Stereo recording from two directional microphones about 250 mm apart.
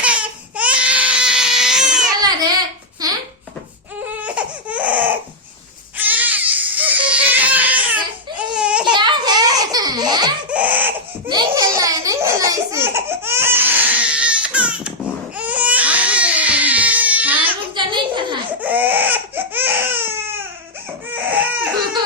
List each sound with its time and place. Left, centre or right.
0.0 s baby cry: centre
3.0 s a sound: centre
4.2 s baby cry: centre
8.9 s baby laughter: centre
10.5 s baby cry: centre
11.3 s laughter: centre
15.4 s crying: centre
17.7 s a sound: centre
18.6 s baby cry: centre